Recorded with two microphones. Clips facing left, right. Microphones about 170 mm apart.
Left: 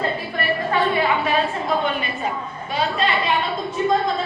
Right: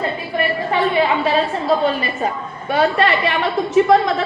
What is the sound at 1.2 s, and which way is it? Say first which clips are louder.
Speech: right 3 dB; 30° right (ahead or behind).